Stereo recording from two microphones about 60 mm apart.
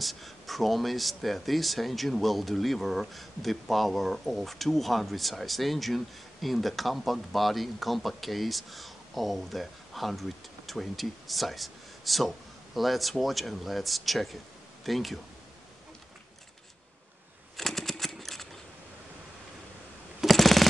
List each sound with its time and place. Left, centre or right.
0.0 s speech: centre
17.6 s a sound: centre
20.2 s jackhammer: centre